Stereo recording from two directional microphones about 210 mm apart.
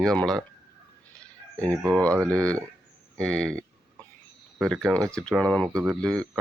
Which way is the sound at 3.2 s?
5° left (ahead or behind).